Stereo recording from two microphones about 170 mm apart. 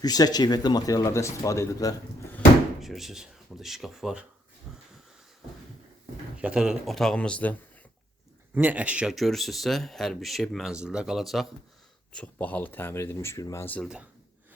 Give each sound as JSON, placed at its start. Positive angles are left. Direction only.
{"t": 0.0, "sound": "speech", "side_deg": 25}
{"t": 2.8, "sound": "speech", "side_deg": 0}
{"t": 4.7, "sound": "wheeze", "side_deg": 0}
{"t": 6.4, "sound": "speech", "side_deg": -5}
{"t": 8.5, "sound": "speech", "side_deg": -10}
{"t": 13.8, "sound": "speech", "side_deg": -5}